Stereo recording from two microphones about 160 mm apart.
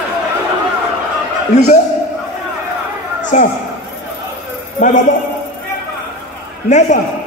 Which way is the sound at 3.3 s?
55° left (ahead or behind).